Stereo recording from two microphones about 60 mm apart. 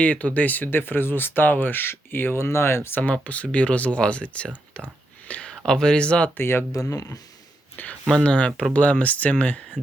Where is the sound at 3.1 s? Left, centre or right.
Left.